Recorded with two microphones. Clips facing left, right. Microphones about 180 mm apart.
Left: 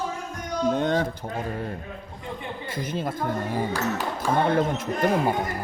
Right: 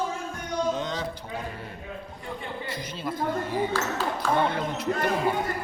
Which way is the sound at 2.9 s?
50° left (ahead or behind).